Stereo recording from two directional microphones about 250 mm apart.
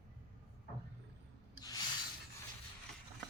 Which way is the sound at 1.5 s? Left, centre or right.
Centre.